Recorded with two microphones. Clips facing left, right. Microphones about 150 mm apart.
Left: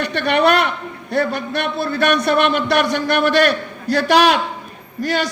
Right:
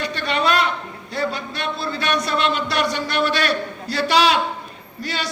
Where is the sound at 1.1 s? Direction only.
55° left (ahead or behind).